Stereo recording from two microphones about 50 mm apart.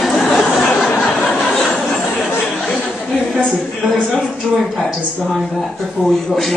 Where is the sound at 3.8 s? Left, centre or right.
Left.